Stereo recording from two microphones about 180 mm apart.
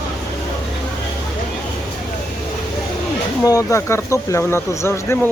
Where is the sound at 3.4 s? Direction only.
20° left (ahead or behind).